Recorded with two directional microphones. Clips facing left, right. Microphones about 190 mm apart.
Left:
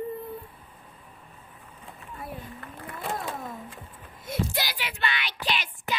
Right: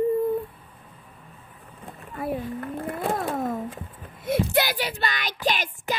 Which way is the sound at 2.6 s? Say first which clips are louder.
Right 10 dB; 50° right (ahead or behind).